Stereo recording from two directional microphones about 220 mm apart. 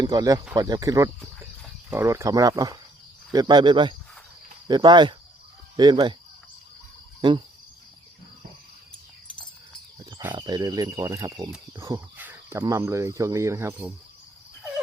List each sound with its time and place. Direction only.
0.0 s speech: 15° right (ahead or behind)
7.2 s speech: 20° right (ahead or behind)
10.0 s cricket: 10° right (ahead or behind)
10.3 s speech: 20° right (ahead or behind)